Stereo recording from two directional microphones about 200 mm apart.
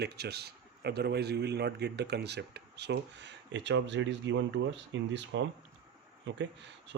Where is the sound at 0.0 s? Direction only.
55° right (ahead or behind).